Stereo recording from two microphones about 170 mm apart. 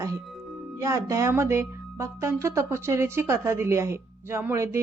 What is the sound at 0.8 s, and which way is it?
Speech, 20° right (ahead or behind).